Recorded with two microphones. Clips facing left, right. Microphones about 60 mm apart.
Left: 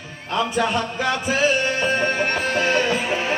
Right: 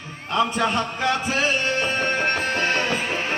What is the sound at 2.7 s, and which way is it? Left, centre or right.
Music, centre.